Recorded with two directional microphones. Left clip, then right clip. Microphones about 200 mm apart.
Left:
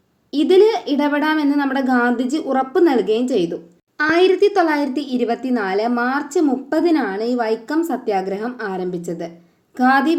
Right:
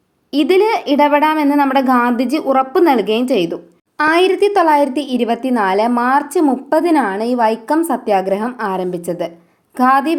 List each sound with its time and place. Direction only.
0.4 s a woman's voice: 20° right (ahead or behind)